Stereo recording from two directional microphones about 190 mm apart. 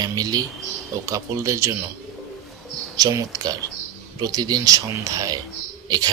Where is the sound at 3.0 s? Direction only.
20° right (ahead or behind).